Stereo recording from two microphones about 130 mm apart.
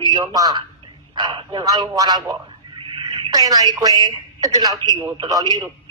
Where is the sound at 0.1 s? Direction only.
30° right (ahead or behind).